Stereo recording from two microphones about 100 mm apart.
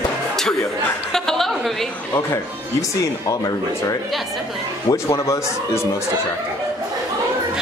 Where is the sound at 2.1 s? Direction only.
25° left (ahead or behind).